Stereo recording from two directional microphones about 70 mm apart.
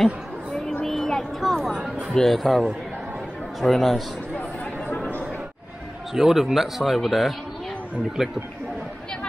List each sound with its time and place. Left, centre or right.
0.0 s a sound: centre
2.1 s speech: centre
4.9 s chatter: left
6.1 s speech: centre